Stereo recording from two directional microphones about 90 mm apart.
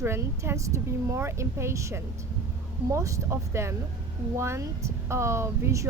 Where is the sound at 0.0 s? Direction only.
30° right (ahead or behind).